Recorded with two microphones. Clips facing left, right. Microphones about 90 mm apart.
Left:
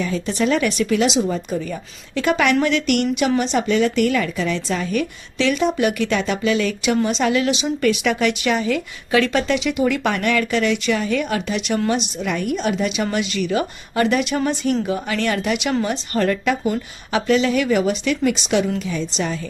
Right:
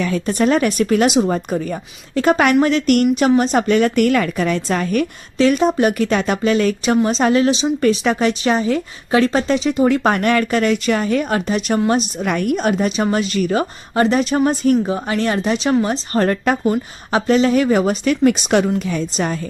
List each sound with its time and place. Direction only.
0.0 s a woman's voice: 50° right (ahead or behind)